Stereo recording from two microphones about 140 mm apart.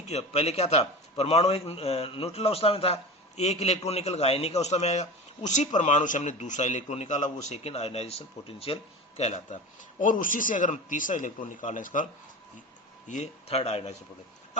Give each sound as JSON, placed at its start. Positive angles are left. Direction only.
{"t": 0.1, "sound": "a man's voice", "side_deg": 50}
{"t": 10.0, "sound": "a man's voice", "side_deg": 70}
{"t": 13.1, "sound": "speech", "side_deg": 60}
{"t": 13.6, "sound": "a man's voice", "side_deg": 45}